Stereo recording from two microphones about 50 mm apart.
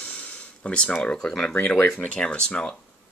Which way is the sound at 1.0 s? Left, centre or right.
Centre.